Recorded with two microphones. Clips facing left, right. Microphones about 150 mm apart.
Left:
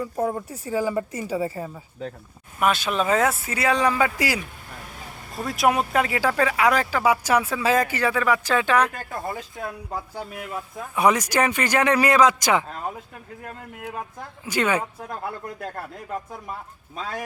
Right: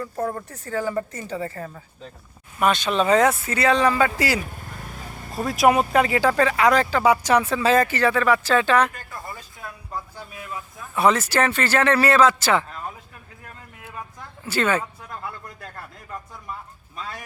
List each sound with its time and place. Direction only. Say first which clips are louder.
0.0 s speech: left 2 dB; 10° left (ahead or behind)
5.5 s speech: right 3 dB; centre (ahead or behind)
8.9 s speech: left 6 dB; 55° left (ahead or behind)
10.9 s speech: right 1 dB; 15° left (ahead or behind)
12.6 s speech: left 3 dB; 55° left (ahead or behind)
14.4 s speech: even; 15° left (ahead or behind)
14.9 s speech: left 4 dB; 50° left (ahead or behind)